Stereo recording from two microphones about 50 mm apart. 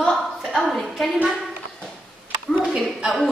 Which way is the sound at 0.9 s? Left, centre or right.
Centre.